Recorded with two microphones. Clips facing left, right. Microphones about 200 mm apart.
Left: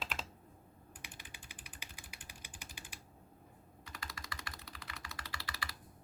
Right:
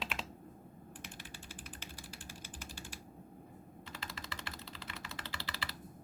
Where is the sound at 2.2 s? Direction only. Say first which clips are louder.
Right 5 dB; 15° left (ahead or behind).